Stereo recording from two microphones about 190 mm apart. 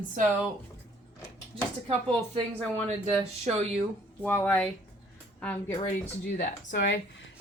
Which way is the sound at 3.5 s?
35° right (ahead or behind).